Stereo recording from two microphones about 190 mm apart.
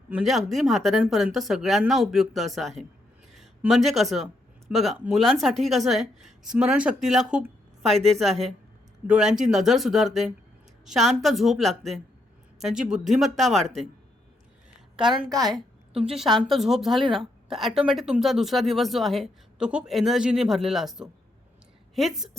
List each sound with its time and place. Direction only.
0.1 s speech: centre (ahead or behind)
3.3 s a sound: centre (ahead or behind)
3.8 s speech: centre (ahead or behind)
9.0 s a woman's voice: 5° right (ahead or behind)
14.9 s a woman's voice: 25° right (ahead or behind)
16.0 s speech: centre (ahead or behind)